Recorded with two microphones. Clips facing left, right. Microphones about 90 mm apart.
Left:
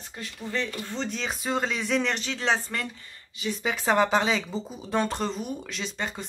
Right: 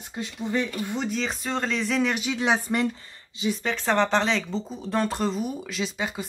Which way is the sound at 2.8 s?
30° right (ahead or behind).